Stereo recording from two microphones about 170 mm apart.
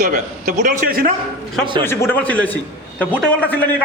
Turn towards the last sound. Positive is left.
turn(degrees=10)  # may be behind; listen again after turning